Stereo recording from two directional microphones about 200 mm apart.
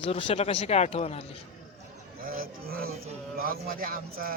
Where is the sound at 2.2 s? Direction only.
45° right (ahead or behind).